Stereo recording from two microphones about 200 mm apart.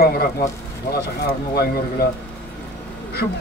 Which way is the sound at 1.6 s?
50° left (ahead or behind).